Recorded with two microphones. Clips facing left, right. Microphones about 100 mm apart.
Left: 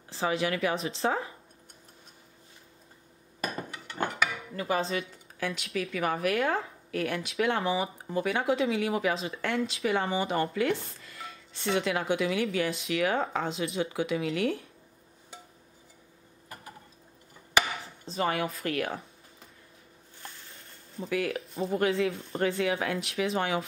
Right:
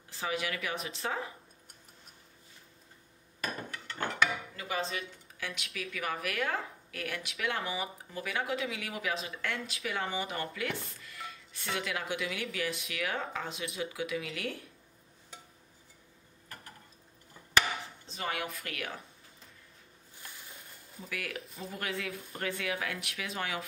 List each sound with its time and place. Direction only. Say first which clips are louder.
0.1 s speech: left 6 dB; 30° left (ahead or behind)
3.3 s a sound: left 3 dB; 15° left (ahead or behind)
4.6 s speech: left 9 dB; 35° left (ahead or behind)
18.0 s speech: left 9 dB; 35° left (ahead or behind)
21.0 s speech: left 10 dB; 30° left (ahead or behind)